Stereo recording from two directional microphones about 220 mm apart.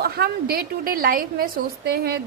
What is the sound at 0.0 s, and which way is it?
A woman's voice, 45° right (ahead or behind).